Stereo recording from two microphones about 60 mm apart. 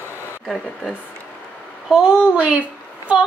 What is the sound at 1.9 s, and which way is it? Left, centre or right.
Speech, centre.